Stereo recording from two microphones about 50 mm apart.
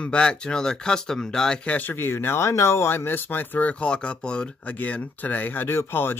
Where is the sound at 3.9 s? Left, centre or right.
Centre; by 5.6 s left.